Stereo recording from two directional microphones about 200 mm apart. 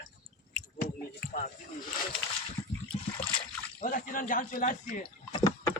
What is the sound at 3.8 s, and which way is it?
Speech, 40° left (ahead or behind).